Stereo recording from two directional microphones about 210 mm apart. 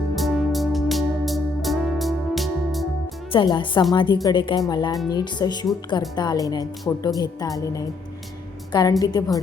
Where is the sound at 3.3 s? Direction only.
20° left (ahead or behind).